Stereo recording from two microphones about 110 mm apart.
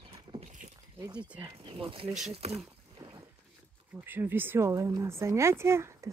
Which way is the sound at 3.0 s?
40° right (ahead or behind).